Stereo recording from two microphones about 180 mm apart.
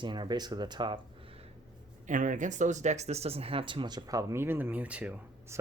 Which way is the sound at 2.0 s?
45° right (ahead or behind).